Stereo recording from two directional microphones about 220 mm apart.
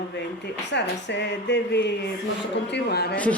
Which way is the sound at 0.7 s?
50° left (ahead or behind).